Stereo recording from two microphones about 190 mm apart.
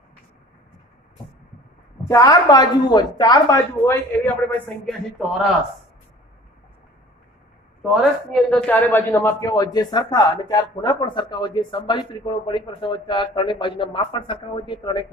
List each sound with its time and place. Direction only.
2.0 s speech: 20° left (ahead or behind)
7.8 s a man's voice: centre (ahead or behind); by 15.0 s 25° left (ahead or behind)